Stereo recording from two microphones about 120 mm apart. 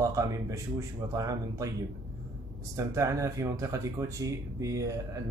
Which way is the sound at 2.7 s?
25° right (ahead or behind).